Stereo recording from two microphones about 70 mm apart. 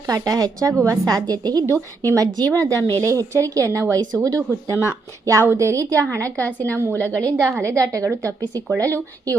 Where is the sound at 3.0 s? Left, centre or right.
Right.